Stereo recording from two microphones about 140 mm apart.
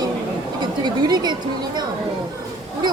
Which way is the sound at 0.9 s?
30° right (ahead or behind).